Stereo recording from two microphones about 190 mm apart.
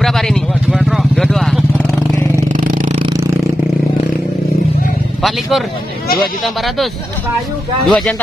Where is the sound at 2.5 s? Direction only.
45° right (ahead or behind).